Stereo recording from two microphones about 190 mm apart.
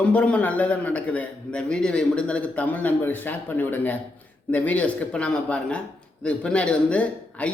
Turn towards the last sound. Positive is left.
turn(degrees=5)  # may be behind; listen again after turning